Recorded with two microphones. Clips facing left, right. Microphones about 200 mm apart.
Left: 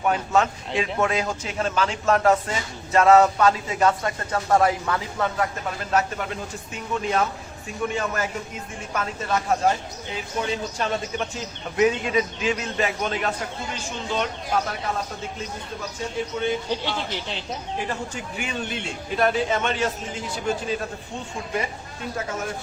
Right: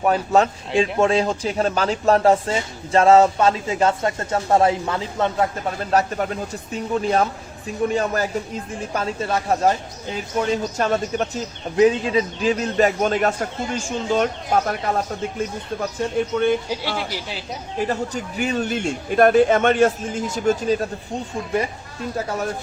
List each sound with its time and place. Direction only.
0.0 s a man's voice: 35° right (ahead or behind); by 16.6 s 55° right (ahead or behind)
17.1 s speech: 5° right (ahead or behind)
17.7 s speech: 40° right (ahead or behind)